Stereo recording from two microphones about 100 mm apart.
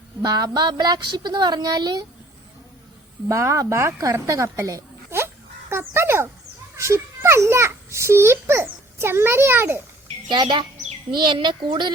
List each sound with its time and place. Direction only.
0.2 s a woman's voice: 45° right (ahead or behind)
3.2 s speech: 30° right (ahead or behind)
4.0 s a sound: 30° right (ahead or behind)
6.7 s a child's voice: 30° right (ahead or behind)
10.2 s a woman's voice: 50° right (ahead or behind)